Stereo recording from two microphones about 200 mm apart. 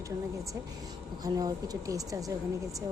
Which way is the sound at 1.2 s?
20° right (ahead or behind).